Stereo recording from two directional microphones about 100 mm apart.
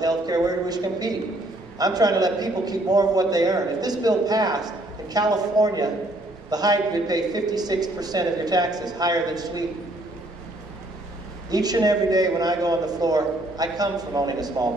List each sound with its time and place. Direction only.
0.0 s a man's voice: 40° right (ahead or behind)
11.5 s a man's voice: 40° right (ahead or behind)